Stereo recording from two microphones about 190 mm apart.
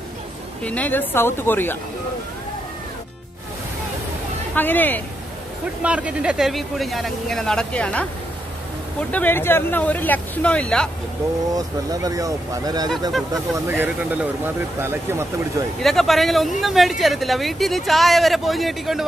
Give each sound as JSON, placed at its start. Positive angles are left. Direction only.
{"t": 0.7, "sound": "speech", "side_deg": 10}
{"t": 4.6, "sound": "speech", "side_deg": 10}
{"t": 5.8, "sound": "speech", "side_deg": -5}
{"t": 9.1, "sound": "speech", "side_deg": 10}
{"t": 11.5, "sound": "speech", "side_deg": -20}
{"t": 15.8, "sound": "speech", "side_deg": 0}